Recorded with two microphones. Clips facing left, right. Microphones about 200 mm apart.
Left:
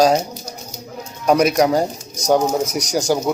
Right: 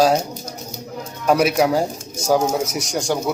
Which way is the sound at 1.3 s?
5° right (ahead or behind).